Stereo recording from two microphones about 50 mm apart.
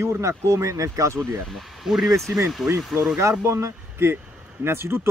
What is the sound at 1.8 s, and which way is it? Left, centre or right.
Speech, centre.